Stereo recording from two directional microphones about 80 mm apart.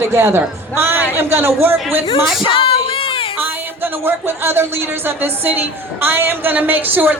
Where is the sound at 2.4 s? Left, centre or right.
Left.